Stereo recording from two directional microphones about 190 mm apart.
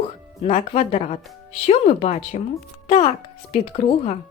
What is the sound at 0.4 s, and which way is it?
Speech, 35° left (ahead or behind).